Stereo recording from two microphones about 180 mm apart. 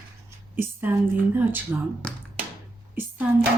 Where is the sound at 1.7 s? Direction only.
10° right (ahead or behind).